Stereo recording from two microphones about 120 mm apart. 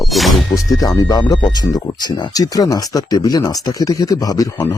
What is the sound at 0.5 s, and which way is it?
Speech, 30° left (ahead or behind).